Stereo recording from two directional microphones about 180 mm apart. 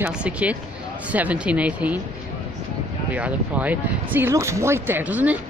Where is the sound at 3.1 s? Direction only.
10° right (ahead or behind).